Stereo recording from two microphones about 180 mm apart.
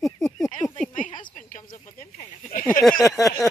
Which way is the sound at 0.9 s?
45° left (ahead or behind).